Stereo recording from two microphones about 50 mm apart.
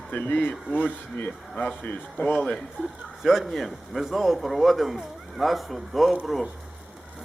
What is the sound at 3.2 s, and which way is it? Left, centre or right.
A man's voice, centre.